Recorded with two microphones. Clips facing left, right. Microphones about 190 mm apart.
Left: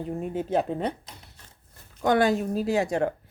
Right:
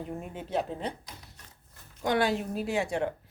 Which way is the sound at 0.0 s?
30° left (ahead or behind).